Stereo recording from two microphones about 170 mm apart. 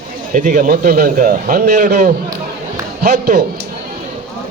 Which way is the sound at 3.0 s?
65° right (ahead or behind).